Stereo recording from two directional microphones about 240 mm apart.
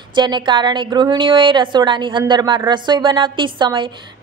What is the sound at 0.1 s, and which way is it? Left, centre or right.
A woman's voice, centre.